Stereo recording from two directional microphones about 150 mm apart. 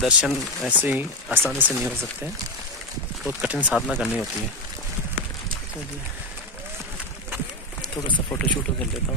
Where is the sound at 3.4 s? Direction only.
10° right (ahead or behind).